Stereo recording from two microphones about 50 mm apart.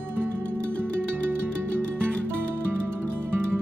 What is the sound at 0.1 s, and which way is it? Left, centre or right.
Music, right.